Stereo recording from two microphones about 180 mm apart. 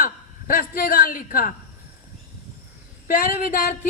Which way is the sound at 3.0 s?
45° left (ahead or behind).